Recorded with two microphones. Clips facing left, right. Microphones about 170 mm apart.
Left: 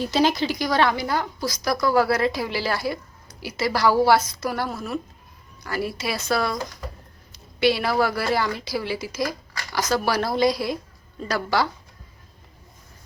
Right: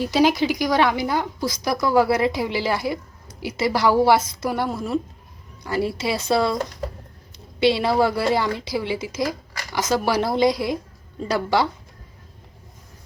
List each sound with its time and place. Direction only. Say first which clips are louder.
0.0 s a woman's voice: right 3 dB; 10° right (ahead or behind)